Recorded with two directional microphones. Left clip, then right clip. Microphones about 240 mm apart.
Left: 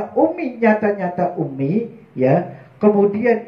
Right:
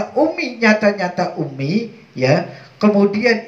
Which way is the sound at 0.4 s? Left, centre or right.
Right.